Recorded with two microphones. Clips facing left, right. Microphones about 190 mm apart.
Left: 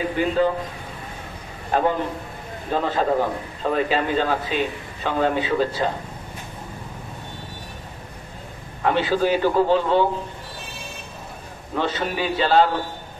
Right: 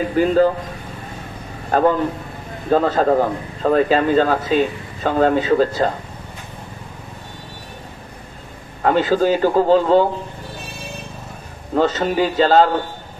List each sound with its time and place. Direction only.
0.2 s a man's voice: 45° right (ahead or behind)
1.7 s a man's voice: 45° right (ahead or behind)
8.8 s speech: 40° right (ahead or behind)
11.7 s speech: 40° right (ahead or behind)